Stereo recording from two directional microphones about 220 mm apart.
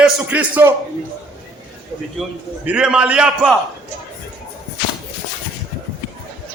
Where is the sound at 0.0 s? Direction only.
5° right (ahead or behind).